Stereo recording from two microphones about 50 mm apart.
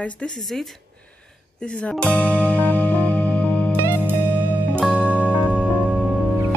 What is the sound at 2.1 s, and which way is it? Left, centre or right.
Music, left.